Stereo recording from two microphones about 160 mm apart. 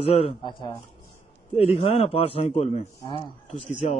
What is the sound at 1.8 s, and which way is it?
A man's voice, 40° left (ahead or behind).